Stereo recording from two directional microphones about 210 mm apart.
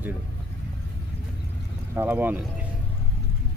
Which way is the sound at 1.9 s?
10° right (ahead or behind).